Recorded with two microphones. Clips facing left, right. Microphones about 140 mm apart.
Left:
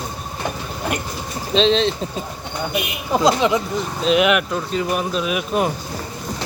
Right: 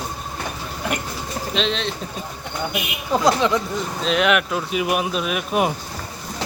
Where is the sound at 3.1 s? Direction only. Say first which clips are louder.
Left 1 dB; 15° left (ahead or behind).